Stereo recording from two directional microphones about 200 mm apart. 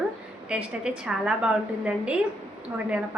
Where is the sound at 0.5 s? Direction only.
5° right (ahead or behind).